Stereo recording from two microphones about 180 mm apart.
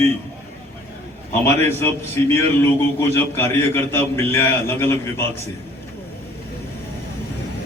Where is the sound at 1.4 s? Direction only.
15° left (ahead or behind).